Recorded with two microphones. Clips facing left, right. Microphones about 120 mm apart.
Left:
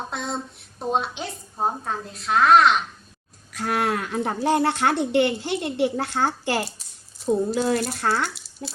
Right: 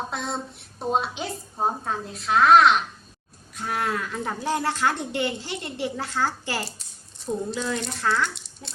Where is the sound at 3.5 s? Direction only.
70° left (ahead or behind).